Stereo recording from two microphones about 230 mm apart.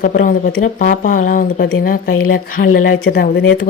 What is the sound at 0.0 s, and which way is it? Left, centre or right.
Speech, left.